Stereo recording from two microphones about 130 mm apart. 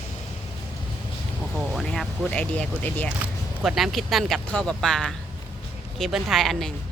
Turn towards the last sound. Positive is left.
turn(degrees=0)  # may be behind; listen again after turning